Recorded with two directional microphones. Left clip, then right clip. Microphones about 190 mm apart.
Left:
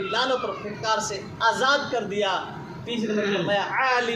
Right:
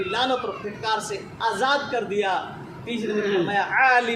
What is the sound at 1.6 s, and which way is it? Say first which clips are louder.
A man's voice: even; 20° right (ahead or behind).